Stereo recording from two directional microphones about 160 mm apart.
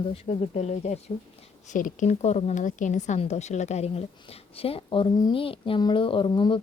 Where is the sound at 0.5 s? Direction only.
45° left (ahead or behind).